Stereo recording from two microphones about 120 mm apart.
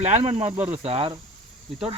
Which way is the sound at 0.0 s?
65° right (ahead or behind).